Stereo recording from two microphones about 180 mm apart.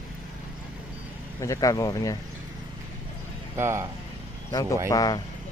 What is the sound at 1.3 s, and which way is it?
Speech, 20° left (ahead or behind).